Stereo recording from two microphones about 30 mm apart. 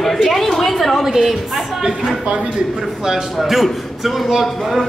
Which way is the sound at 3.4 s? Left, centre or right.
Centre.